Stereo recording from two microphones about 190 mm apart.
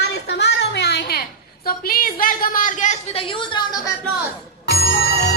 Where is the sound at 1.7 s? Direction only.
50° left (ahead or behind); by 3.9 s 20° left (ahead or behind).